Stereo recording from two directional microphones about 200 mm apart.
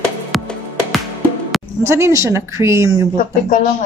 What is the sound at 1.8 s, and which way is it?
Speech, 15° right (ahead or behind).